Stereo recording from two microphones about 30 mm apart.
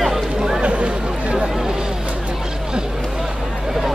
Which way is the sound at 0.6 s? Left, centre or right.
Right.